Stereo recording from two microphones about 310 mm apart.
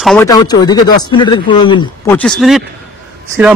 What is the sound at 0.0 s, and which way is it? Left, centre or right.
Speech, centre.